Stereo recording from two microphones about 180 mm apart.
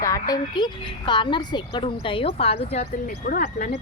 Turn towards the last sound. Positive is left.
turn(degrees=50)  # may be behind; listen again after turning